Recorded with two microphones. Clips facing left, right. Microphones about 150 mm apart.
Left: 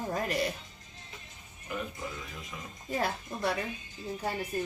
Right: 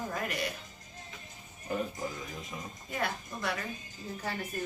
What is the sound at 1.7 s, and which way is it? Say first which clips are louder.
Music: right 3 dB; 40° right (ahead or behind).